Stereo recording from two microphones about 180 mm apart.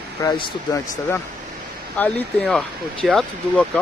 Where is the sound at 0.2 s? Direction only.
20° left (ahead or behind).